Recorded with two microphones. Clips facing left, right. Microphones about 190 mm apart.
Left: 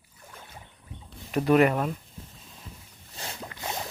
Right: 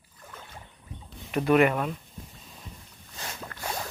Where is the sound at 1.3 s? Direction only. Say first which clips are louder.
Left 1 dB; 35° left (ahead or behind).